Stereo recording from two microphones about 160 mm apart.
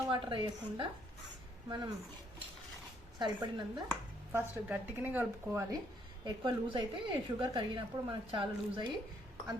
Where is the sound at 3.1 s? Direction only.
30° right (ahead or behind).